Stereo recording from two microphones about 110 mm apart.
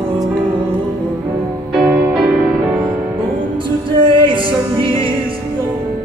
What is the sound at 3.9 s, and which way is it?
Music, 50° right (ahead or behind).